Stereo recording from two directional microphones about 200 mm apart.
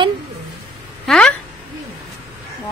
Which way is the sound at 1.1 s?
5° left (ahead or behind).